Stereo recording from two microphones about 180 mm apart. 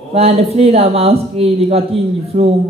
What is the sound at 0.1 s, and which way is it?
Speech, 35° right (ahead or behind).